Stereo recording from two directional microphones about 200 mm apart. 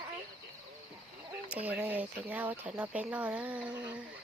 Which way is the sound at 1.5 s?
5° right (ahead or behind).